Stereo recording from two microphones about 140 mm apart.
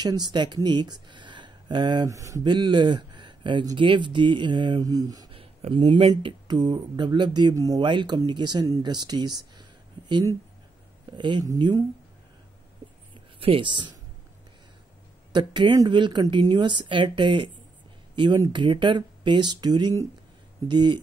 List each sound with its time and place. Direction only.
0.0 s speech: 30° right (ahead or behind)
2.0 s mantra: 20° right (ahead or behind)
2.4 s speech: 35° right (ahead or behind)
5.3 s speech: 40° right (ahead or behind)
13.4 s speech: 40° right (ahead or behind)
15.3 s speech: 30° right (ahead or behind)